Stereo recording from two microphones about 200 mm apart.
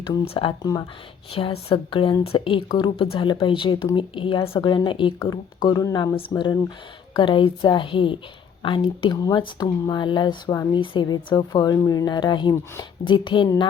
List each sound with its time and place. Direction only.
0.0 s speech: 25° left (ahead or behind)